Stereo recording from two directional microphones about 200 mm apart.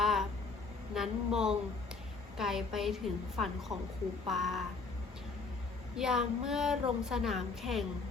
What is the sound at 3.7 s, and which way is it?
Speech, 30° right (ahead or behind).